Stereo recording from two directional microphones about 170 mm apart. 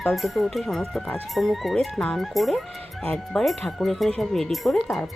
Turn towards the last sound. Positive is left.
turn(degrees=0)  # may be behind; listen again after turning